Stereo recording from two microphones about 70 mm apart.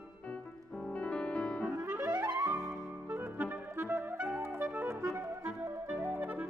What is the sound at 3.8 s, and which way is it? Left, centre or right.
Clarinet, right.